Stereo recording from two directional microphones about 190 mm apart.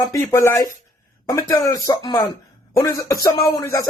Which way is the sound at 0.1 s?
15° left (ahead or behind).